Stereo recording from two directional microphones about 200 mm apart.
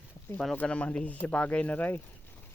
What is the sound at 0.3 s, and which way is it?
Speech, 5° left (ahead or behind).